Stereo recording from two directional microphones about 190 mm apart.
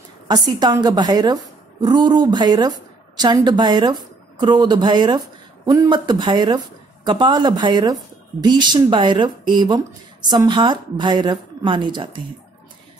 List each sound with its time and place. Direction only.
0.3 s a woman's voice: 20° right (ahead or behind)